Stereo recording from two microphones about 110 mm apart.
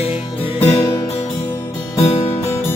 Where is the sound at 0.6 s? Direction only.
15° left (ahead or behind).